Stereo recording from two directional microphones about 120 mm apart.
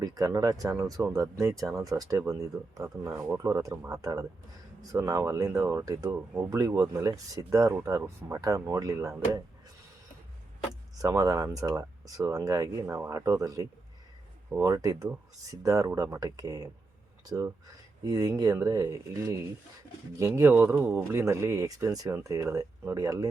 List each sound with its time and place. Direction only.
0.0 s speech: 30° right (ahead or behind)
11.0 s speech: 30° right (ahead or behind)